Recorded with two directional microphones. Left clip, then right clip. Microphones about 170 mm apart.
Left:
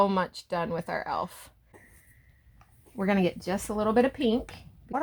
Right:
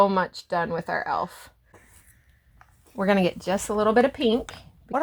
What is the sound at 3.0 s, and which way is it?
A woman's voice, 40° right (ahead or behind).